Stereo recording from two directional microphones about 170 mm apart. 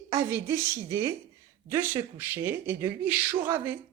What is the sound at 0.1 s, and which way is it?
Speech, 15° right (ahead or behind).